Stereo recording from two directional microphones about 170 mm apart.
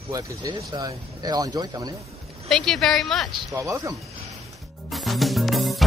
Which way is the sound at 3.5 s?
20° right (ahead or behind).